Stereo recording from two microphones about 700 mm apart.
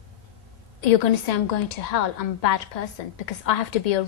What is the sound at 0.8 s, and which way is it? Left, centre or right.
A woman's voice, left.